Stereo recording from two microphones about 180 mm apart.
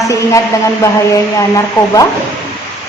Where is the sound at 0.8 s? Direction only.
15° left (ahead or behind).